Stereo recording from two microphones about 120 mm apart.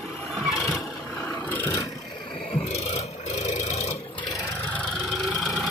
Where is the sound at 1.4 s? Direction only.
15° left (ahead or behind).